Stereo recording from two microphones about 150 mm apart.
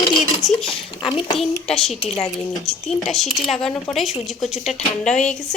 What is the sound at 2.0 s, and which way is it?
Speech, 45° left (ahead or behind).